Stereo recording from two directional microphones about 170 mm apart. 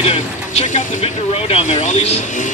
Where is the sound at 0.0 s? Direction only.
35° left (ahead or behind).